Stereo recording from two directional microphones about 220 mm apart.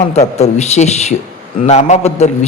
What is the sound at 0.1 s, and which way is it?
A man's voice, 30° left (ahead or behind).